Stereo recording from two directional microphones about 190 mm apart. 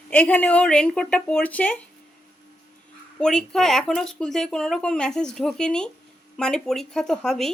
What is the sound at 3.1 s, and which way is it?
Speech, 5° left (ahead or behind).